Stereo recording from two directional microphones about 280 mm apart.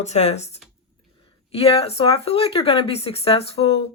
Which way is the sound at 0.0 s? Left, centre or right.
Left.